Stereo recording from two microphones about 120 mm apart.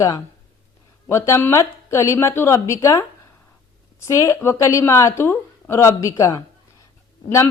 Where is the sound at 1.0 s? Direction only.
25° left (ahead or behind).